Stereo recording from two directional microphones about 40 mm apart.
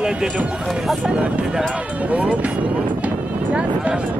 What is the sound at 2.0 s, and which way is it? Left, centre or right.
Speech, right.